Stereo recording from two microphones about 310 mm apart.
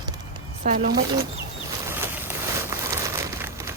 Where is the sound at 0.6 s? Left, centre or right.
Right.